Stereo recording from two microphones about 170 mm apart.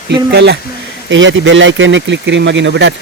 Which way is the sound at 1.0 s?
90° right.